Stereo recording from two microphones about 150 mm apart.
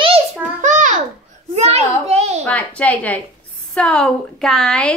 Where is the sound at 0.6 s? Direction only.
55° right (ahead or behind).